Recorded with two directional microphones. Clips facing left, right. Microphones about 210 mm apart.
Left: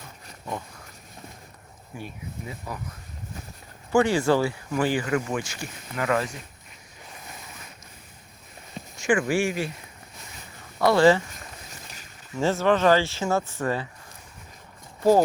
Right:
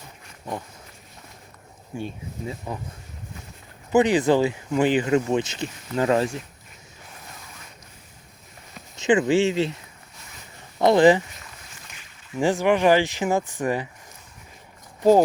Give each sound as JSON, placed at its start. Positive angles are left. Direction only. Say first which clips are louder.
{"t": 2.0, "sound": "speech", "louder": "right 5 dB", "side_deg": -25}
{"t": 3.9, "sound": "speech", "louder": "right 3 dB", "side_deg": -20}
{"t": 9.0, "sound": "speech", "louder": "right 4 dB", "side_deg": -20}
{"t": 10.8, "sound": "speech", "louder": "right 2 dB", "side_deg": -20}
{"t": 12.3, "sound": "speech", "louder": "right 2 dB", "side_deg": -15}